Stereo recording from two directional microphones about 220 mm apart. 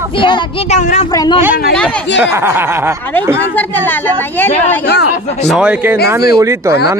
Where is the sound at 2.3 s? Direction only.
10° right (ahead or behind).